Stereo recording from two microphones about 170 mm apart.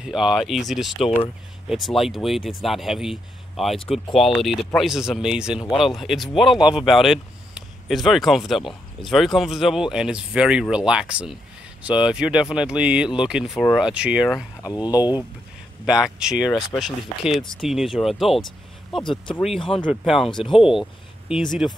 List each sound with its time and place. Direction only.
0.0 s speech: 5° right (ahead or behind)
14.6 s speech: 20° left (ahead or behind)
15.8 s speech: 5° right (ahead or behind)
19.6 s speech: 30° left (ahead or behind)
19.9 s speech: centre (ahead or behind)
20.3 s speech: 30° left (ahead or behind)
21.3 s speech: 5° right (ahead or behind)